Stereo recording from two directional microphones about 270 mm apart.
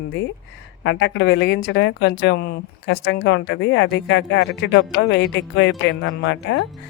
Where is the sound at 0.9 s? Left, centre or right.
Left.